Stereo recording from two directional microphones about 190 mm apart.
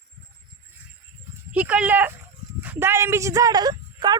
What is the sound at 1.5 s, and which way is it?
A woman's voice, 5° right (ahead or behind).